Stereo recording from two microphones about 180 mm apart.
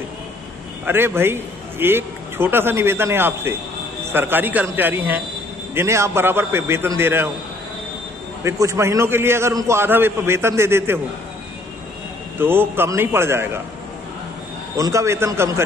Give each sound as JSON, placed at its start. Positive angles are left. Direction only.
{"t": 0.8, "sound": "a man's voice", "side_deg": -10}
{"t": 8.5, "sound": "a man's voice", "side_deg": -15}
{"t": 12.4, "sound": "a man's voice", "side_deg": -10}
{"t": 14.8, "sound": "a man's voice", "side_deg": -15}